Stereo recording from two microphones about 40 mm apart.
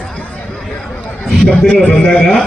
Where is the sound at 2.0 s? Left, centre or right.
Left.